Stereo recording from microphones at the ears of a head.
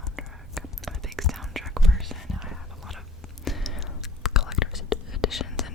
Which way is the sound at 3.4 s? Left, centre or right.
Left.